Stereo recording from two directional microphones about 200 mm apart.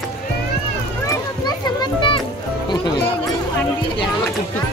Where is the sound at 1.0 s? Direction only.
20° left (ahead or behind).